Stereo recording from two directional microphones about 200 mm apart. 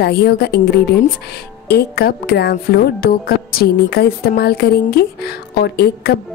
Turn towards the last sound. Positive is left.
turn(degrees=55)  # may be behind; listen again after turning